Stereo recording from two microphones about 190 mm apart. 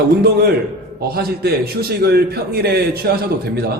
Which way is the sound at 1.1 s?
55° right (ahead or behind).